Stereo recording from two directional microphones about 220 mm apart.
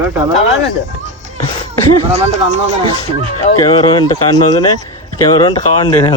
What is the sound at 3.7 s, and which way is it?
Speech, 20° left (ahead or behind).